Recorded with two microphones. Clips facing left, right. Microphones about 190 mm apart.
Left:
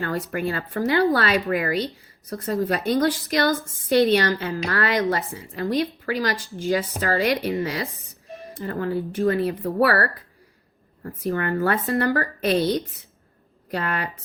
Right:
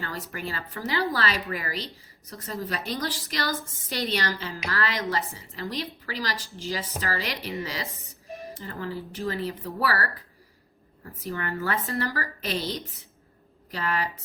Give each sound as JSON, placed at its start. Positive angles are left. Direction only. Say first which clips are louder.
{"t": 0.3, "sound": "a woman's voice", "louder": "left 8 dB", "side_deg": 55}